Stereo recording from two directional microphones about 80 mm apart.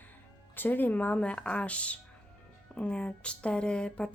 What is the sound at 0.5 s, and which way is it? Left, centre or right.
A woman's voice, left.